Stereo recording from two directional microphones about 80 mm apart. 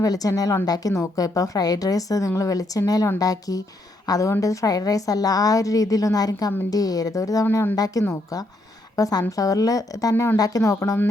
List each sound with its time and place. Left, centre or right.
0.0 s a woman's voice: left